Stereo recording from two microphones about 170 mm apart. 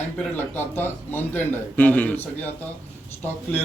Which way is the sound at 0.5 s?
10° left (ahead or behind).